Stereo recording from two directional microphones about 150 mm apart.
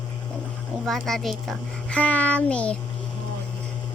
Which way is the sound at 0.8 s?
Centre (ahead or behind).